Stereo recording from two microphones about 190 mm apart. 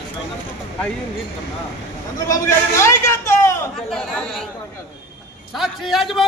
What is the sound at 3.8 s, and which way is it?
Speech, 5° left (ahead or behind).